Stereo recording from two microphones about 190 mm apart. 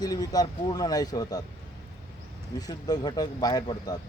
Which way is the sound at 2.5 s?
20° left (ahead or behind).